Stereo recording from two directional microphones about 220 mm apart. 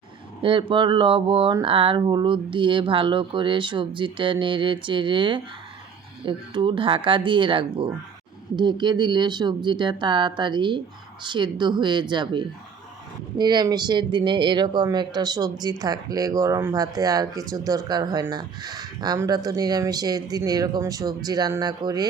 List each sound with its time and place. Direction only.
0.7 s speech: 25° right (ahead or behind)